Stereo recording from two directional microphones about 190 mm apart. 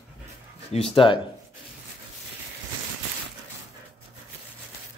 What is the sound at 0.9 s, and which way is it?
Speech, 25° left (ahead or behind).